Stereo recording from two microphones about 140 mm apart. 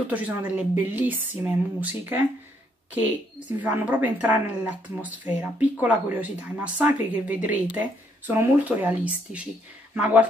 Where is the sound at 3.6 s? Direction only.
10° right (ahead or behind).